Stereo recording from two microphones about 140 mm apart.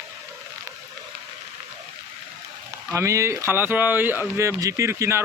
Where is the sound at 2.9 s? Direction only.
20° right (ahead or behind).